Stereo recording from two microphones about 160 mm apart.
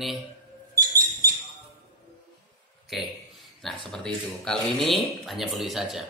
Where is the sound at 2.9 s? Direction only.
Centre (ahead or behind).